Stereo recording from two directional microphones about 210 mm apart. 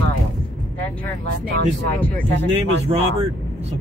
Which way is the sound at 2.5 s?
30° right (ahead or behind).